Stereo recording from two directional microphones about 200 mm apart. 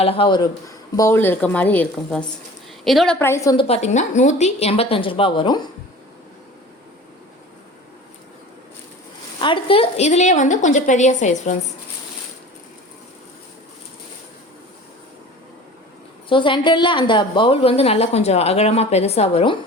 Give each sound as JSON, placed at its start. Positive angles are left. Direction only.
{"t": 0.0, "sound": "a woman's voice", "side_deg": 30}
{"t": 0.9, "sound": "speech", "side_deg": 15}
{"t": 3.6, "sound": "a woman's voice", "side_deg": 30}
{"t": 9.4, "sound": "a woman's voice", "side_deg": 25}
{"t": 16.3, "sound": "a woman's voice", "side_deg": 25}